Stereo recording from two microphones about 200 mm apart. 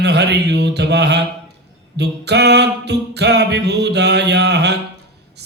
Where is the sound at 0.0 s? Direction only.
55° right (ahead or behind).